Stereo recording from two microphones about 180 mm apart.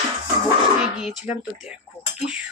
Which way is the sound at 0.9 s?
5° right (ahead or behind).